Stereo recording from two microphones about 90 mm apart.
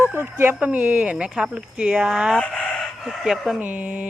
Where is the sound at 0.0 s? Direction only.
25° right (ahead or behind); by 2.4 s 10° right (ahead or behind).